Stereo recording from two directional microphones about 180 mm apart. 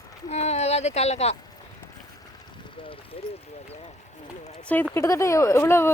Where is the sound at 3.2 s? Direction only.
35° left (ahead or behind).